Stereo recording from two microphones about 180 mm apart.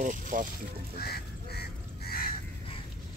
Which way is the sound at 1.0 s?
60° left (ahead or behind).